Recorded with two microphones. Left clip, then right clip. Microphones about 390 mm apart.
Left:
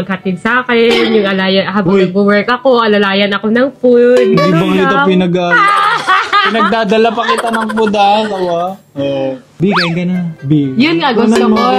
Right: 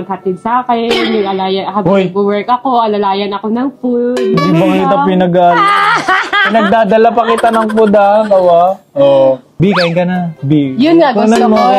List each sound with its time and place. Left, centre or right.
0.8 s speech: centre
4.1 s speech: centre
5.8 s snicker: left
6.7 s speech: centre
7.5 s speech: right
10.8 s a woman's voice: left
11.3 s speech: centre